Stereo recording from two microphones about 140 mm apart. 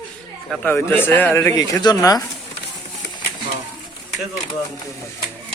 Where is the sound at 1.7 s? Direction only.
25° left (ahead or behind).